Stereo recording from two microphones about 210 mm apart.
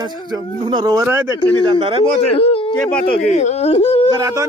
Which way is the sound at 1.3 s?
10° left (ahead or behind).